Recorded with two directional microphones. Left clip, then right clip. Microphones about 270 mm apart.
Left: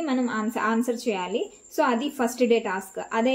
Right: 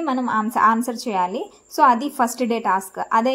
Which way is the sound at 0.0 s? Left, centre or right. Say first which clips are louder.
Right 5 dB; right.